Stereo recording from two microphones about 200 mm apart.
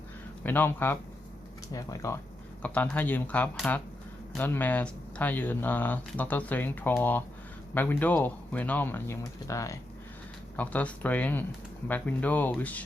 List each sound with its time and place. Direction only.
0.4 s speech: 10° left (ahead or behind)